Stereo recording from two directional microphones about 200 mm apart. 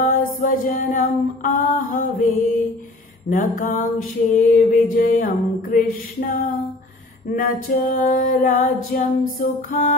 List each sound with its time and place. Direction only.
0.0 s female singing: 40° left (ahead or behind)
7.2 s female singing: 45° left (ahead or behind)